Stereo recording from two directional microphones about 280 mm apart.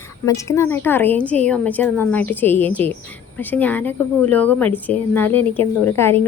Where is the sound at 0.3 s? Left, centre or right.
Centre.